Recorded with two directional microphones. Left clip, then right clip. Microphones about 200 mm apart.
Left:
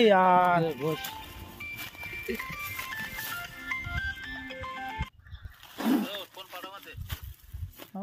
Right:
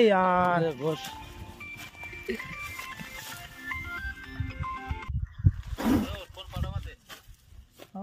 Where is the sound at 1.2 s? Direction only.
55° left (ahead or behind).